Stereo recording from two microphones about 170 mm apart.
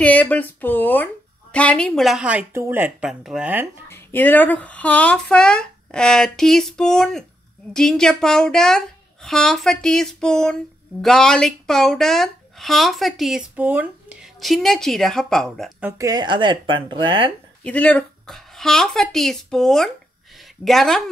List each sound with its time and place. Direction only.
0.0 s a woman's voice: 10° left (ahead or behind); by 3.6 s 5° right (ahead or behind)
3.9 s a woman's voice: 10° left (ahead or behind)
15.8 s speech: 20° right (ahead or behind)
17.6 s a woman's voice: 10° left (ahead or behind)
20.3 s a sound: centre (ahead or behind)